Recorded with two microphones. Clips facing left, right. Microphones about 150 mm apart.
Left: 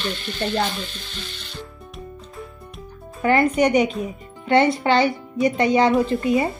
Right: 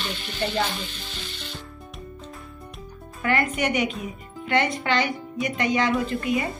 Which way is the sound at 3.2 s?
35° left (ahead or behind).